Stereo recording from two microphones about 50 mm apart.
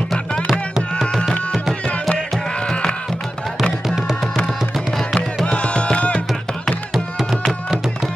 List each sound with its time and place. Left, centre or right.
0.5 s music: centre
2.0 s music: centre
3.8 s music: centre
5.1 s music: centre
6.9 s music: centre